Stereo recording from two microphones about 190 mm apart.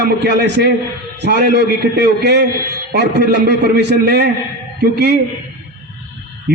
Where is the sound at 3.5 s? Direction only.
60° right (ahead or behind).